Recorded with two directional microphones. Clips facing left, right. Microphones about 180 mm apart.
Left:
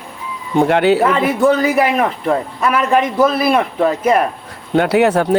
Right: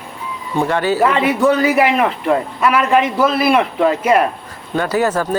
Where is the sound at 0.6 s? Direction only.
65° left (ahead or behind).